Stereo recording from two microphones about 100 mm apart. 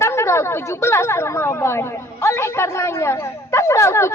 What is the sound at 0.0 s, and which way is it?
Speech, 30° left (ahead or behind).